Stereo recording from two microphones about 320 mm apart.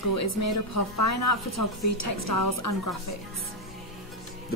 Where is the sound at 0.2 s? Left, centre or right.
Left.